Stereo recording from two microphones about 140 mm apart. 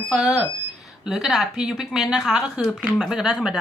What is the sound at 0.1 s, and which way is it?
A woman's voice, 5° right (ahead or behind).